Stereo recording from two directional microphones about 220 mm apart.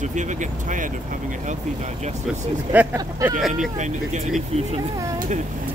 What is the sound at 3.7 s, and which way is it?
Speech, 35° right (ahead or behind).